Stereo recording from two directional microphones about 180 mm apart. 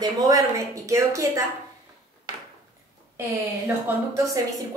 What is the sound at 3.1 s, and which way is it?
A woman's voice, 15° right (ahead or behind).